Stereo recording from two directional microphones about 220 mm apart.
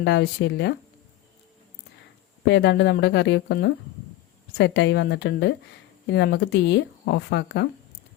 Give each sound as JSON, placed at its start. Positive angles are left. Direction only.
{"t": 0.0, "sound": "speech", "side_deg": 50}
{"t": 2.4, "sound": "speech", "side_deg": 55}